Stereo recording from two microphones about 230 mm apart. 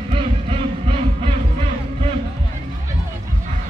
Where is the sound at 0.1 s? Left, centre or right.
Right.